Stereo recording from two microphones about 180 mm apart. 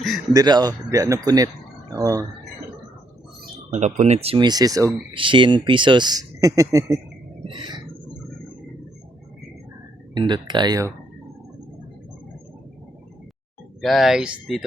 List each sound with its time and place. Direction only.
0.3 s speech: 25° right (ahead or behind)
3.7 s speech: 40° right (ahead or behind); by 7.0 s 15° right (ahead or behind)
7.4 s a sound: 25° right (ahead or behind)
10.2 s speech: 25° right (ahead or behind)
13.8 s speech: centre (ahead or behind)